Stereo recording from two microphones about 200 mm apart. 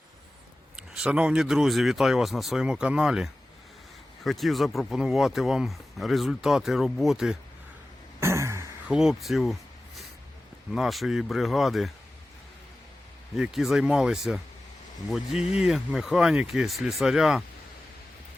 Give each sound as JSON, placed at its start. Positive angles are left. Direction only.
{"t": 0.8, "sound": "speech", "side_deg": -5}
{"t": 8.2, "sound": "throat clearing", "side_deg": -15}
{"t": 9.0, "sound": "speech", "side_deg": 0}
{"t": 13.3, "sound": "speech", "side_deg": 0}